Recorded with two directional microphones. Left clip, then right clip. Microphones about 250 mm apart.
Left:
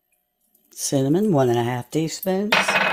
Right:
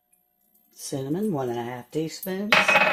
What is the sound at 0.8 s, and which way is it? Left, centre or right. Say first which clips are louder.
Speech: left 8 dB; left.